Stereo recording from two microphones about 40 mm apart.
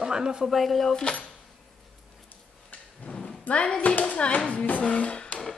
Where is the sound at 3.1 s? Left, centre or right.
Centre.